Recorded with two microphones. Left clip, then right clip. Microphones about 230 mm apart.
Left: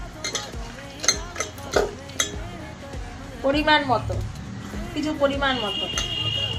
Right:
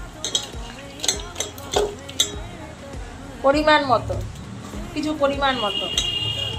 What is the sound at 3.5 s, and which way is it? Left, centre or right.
Speech, centre.